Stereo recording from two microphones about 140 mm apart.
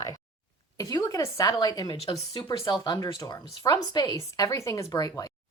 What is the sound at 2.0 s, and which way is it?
Speech, 45° left (ahead or behind).